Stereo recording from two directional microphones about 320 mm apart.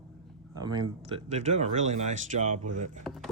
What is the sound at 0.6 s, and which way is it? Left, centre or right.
Speech, centre.